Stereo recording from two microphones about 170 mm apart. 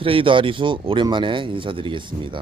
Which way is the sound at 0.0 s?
30° right (ahead or behind).